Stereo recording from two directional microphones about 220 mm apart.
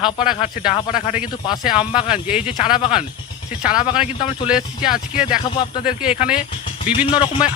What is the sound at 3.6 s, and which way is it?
Speech, 5° right (ahead or behind).